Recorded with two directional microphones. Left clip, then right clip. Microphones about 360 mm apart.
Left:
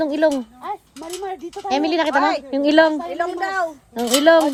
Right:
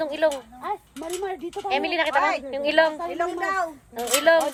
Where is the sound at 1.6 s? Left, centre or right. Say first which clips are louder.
Left 4 dB; left.